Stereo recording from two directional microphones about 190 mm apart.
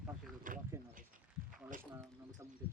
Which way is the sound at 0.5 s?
45° right (ahead or behind).